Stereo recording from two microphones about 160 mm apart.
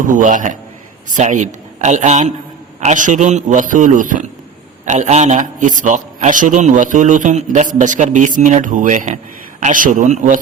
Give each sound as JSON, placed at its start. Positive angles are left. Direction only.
{"t": 0.0, "sound": "a man's voice", "side_deg": -55}